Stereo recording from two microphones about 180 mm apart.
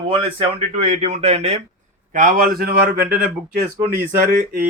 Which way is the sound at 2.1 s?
50° right (ahead or behind).